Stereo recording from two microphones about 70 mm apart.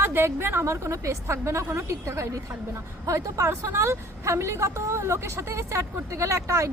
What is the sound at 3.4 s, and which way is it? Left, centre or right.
A woman's voice, right.